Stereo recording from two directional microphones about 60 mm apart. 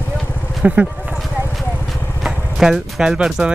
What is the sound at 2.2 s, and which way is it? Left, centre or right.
Vehicle, centre.